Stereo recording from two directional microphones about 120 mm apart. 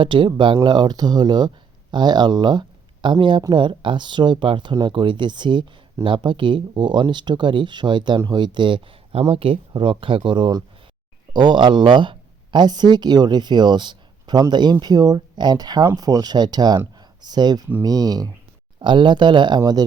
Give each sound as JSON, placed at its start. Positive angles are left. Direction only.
{"t": 0.0, "sound": "speech", "side_deg": -45}